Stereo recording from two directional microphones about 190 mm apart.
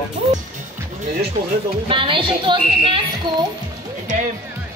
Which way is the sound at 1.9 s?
25° right (ahead or behind).